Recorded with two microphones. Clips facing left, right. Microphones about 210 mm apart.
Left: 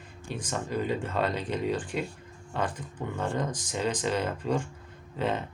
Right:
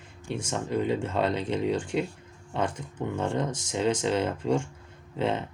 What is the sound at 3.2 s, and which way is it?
Speech, 25° right (ahead or behind).